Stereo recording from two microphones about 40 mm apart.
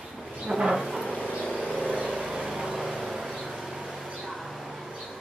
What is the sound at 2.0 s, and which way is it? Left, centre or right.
Vehicle, right.